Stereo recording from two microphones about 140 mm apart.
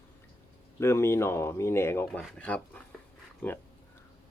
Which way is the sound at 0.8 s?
20° left (ahead or behind).